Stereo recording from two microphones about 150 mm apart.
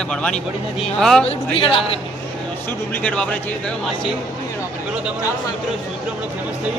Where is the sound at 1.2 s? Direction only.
35° left (ahead or behind).